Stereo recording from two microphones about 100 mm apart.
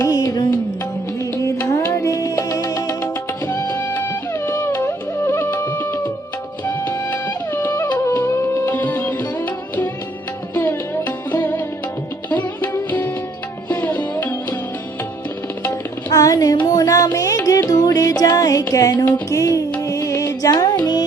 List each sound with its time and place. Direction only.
0.0 s music: 35° left (ahead or behind)
3.0 s music: 20° left (ahead or behind)
10.5 s sitar: 20° left (ahead or behind)
13.7 s music: 20° left (ahead or behind)
16.0 s a sound: 35° left (ahead or behind)
16.6 s music: 35° left (ahead or behind)